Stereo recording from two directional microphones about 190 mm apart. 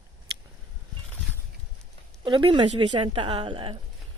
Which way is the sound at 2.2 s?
25° right (ahead or behind).